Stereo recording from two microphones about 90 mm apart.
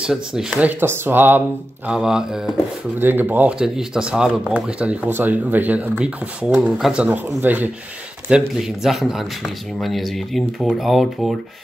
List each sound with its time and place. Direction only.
0.0 s speech: 5° right (ahead or behind)
0.7 s speech: 25° right (ahead or behind)
1.9 s speech: 5° right (ahead or behind)
3.0 s speech: 20° right (ahead or behind)
8.3 s speech: 5° right (ahead or behind)